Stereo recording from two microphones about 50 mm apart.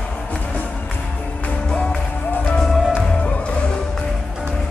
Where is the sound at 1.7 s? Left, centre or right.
Centre.